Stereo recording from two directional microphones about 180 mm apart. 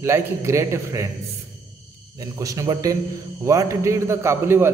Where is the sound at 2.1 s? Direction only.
20° right (ahead or behind).